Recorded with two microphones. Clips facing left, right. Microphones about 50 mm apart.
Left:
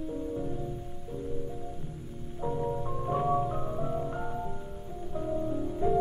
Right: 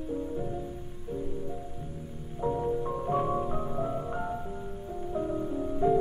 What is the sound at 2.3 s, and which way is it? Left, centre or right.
Music, centre.